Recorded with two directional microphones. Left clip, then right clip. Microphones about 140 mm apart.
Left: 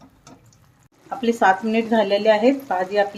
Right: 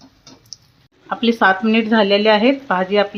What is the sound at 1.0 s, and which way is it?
Speech, 45° right (ahead or behind).